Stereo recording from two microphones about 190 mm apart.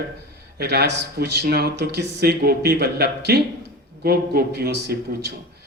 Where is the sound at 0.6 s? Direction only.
60° right (ahead or behind).